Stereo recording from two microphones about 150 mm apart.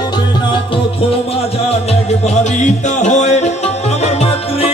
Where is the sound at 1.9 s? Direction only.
50° left (ahead or behind).